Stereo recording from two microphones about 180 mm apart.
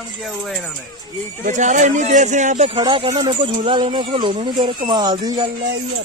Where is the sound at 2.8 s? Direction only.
25° right (ahead or behind).